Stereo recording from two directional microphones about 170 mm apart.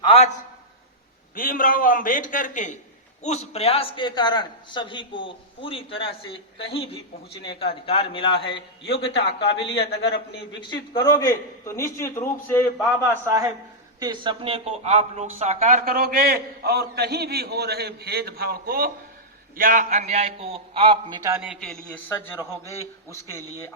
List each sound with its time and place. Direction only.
0.0 s a man's voice: 35° left (ahead or behind)
1.4 s a man's voice: 55° left (ahead or behind); by 9.8 s 30° left (ahead or behind)
9.8 s a man's voice: 90° left
10.6 s a man's voice: 25° left (ahead or behind)
13.1 s a man's voice: 15° right (ahead or behind); by 15.8 s 45° right (ahead or behind)
15.8 s a man's voice: 60° right (ahead or behind); by 21.2 s 30° right (ahead or behind)
21.4 s a man's voice: centre (ahead or behind)
22.1 s a man's voice: 15° left (ahead or behind)